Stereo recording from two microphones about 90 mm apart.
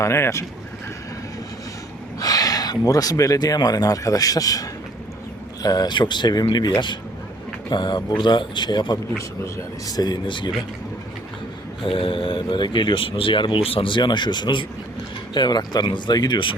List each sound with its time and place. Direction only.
0.0 s speech: 30° left (ahead or behind)
2.1 s speech: 45° left (ahead or behind); by 10.5 s 60° left (ahead or behind)
11.9 s speech: 80° left; by 16.6 s 60° left (ahead or behind)